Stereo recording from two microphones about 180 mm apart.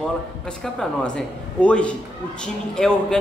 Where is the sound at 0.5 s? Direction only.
5° left (ahead or behind).